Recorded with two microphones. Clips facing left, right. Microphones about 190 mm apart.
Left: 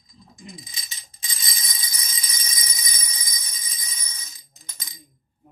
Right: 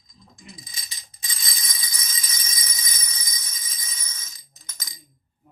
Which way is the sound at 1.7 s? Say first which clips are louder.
Even; 20° left (ahead or behind).